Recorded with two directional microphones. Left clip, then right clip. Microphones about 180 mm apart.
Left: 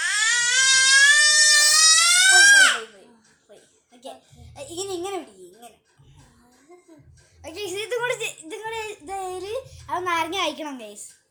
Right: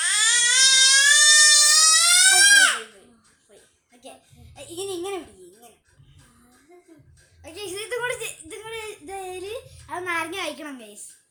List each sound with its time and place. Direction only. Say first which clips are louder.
0.0 s a sound: even; 35° right (ahead or behind)
4.5 s speech: left 1 dB; 15° left (ahead or behind)
7.4 s speech: left 3 dB; 10° left (ahead or behind)